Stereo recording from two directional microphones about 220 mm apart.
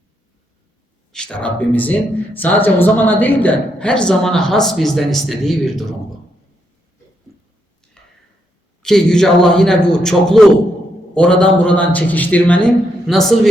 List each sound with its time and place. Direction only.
1.1 s speech: 5° left (ahead or behind)
8.8 s speech: 5° left (ahead or behind)